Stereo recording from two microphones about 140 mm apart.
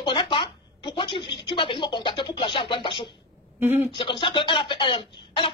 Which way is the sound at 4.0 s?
35° left (ahead or behind).